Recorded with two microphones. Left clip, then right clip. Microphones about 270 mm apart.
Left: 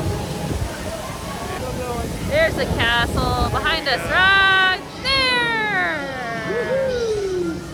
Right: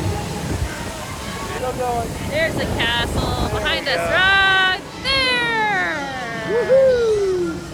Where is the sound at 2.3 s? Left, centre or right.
Left; by 6.4 s centre.